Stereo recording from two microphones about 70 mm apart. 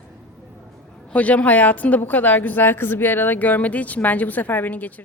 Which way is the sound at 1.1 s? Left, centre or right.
Left.